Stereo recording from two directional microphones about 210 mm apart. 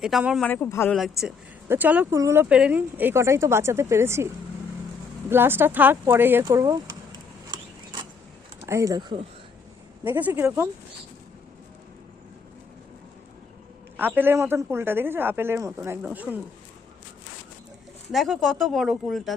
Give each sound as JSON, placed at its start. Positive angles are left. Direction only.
{"t": 0.0, "sound": "speech", "side_deg": -5}
{"t": 0.4, "sound": "speech", "side_deg": 10}
{"t": 0.9, "sound": "speech", "side_deg": 0}
{"t": 5.3, "sound": "speech", "side_deg": -10}
{"t": 8.6, "sound": "speech", "side_deg": -15}
{"t": 10.0, "sound": "speech", "side_deg": -10}
{"t": 13.9, "sound": "speech", "side_deg": -10}
{"t": 18.1, "sound": "speech", "side_deg": 0}